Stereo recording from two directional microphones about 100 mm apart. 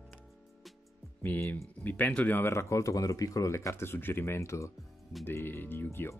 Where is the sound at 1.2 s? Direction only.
20° left (ahead or behind).